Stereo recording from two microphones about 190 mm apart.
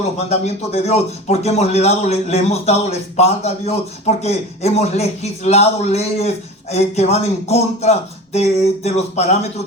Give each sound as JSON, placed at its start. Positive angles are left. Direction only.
{"t": 0.3, "sound": "speech", "side_deg": 35}